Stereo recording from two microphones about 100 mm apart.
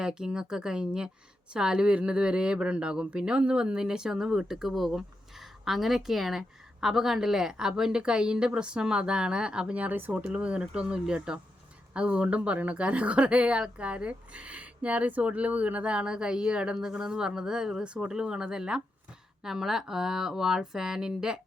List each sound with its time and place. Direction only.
0.0 s speech: 10° right (ahead or behind)